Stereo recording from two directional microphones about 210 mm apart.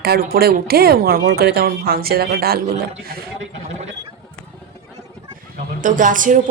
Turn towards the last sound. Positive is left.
turn(degrees=-40)  # may be behind; listen again after turning